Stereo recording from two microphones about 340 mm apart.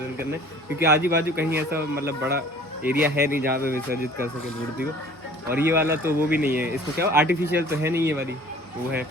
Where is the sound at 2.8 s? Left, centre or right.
Centre.